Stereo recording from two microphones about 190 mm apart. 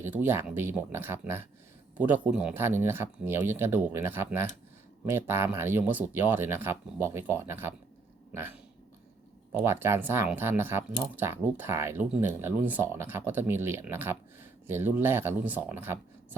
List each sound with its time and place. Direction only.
0.0 s speech: 10° right (ahead or behind)